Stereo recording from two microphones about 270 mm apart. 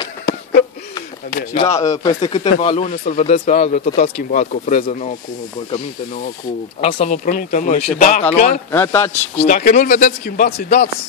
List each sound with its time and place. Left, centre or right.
0.3 s a sound: left
1.5 s speech: centre
6.8 s speech: left
8.7 s speech: centre
9.4 s speech: left